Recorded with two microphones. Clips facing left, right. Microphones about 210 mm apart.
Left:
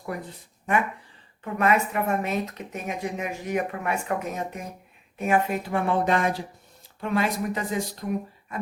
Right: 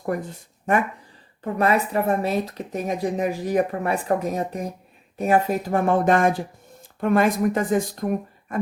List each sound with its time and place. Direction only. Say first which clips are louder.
0.0 s speech: right 7 dB; 45° right (ahead or behind)
1.5 s a woman's voice: right 2 dB; 35° right (ahead or behind)